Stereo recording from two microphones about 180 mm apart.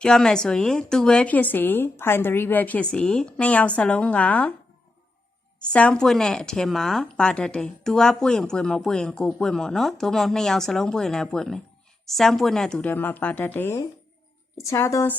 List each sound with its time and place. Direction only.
0.0 s speech: 5° left (ahead or behind)
5.5 s a woman's voice: 5° left (ahead or behind)